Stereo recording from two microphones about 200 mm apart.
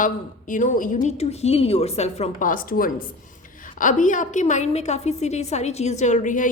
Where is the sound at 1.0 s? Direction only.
30° left (ahead or behind).